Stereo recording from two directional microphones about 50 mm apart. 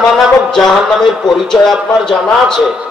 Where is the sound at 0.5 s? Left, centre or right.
Centre.